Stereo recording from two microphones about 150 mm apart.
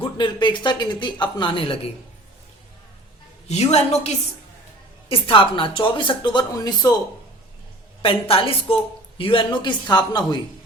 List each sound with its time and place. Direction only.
0.0 s a woman's voice: 30° left (ahead or behind)
3.5 s a woman's voice: 45° left (ahead or behind); by 7.0 s 25° left (ahead or behind)
8.0 s a woman's voice: 40° left (ahead or behind)